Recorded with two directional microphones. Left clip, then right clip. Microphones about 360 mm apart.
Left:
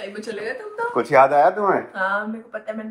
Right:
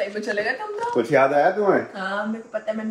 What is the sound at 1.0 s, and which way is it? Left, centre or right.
Speech, left.